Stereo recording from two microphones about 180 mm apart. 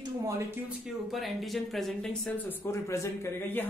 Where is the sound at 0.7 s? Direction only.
Centre (ahead or behind).